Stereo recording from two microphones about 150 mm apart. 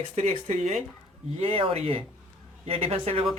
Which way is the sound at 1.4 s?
40° right (ahead or behind).